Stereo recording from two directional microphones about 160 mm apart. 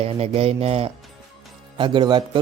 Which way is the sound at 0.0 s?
40° right (ahead or behind).